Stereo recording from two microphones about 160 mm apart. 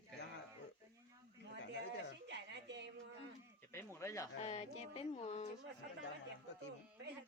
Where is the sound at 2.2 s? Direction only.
90° right.